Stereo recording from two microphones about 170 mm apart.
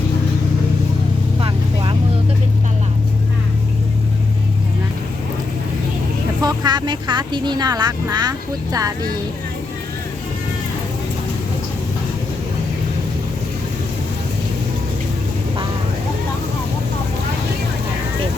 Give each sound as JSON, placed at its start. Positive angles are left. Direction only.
{"t": 1.4, "sound": "vehicle", "side_deg": -30}
{"t": 6.4, "sound": "speech", "side_deg": -25}